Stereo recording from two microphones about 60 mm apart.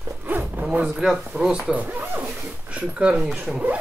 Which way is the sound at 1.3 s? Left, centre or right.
Centre.